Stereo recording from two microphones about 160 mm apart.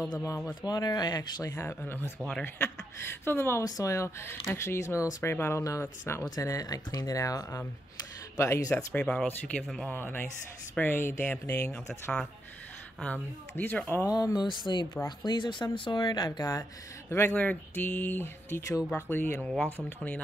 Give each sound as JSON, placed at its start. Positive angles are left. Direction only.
{"t": 0.6, "sound": "speech", "side_deg": 25}
{"t": 9.0, "sound": "speech", "side_deg": 5}
{"t": 14.1, "sound": "speech", "side_deg": 25}